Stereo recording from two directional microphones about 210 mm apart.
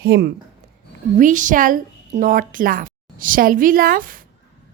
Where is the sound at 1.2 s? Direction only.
40° right (ahead or behind).